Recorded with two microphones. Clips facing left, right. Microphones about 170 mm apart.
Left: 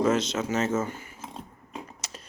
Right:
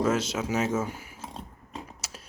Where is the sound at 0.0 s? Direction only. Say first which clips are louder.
Left 2 dB; 5° right (ahead or behind).